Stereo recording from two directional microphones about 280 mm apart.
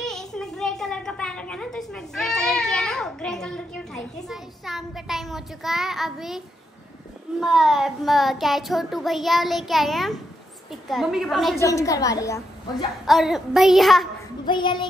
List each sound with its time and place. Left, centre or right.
0.0 s a sound: centre
7.3 s child singing: centre
11.6 s a woman's voice: centre
13.0 s child singing: centre
14.4 s a woman's voice: centre